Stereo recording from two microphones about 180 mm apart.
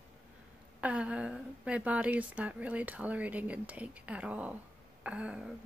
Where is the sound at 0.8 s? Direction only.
5° right (ahead or behind).